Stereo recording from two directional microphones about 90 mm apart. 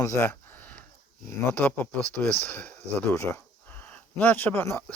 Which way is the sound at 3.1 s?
30° left (ahead or behind).